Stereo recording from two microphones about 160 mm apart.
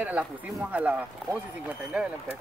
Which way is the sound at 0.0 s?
5° right (ahead or behind).